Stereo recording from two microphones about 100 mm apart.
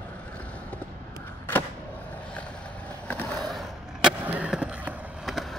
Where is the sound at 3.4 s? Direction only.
Centre (ahead or behind).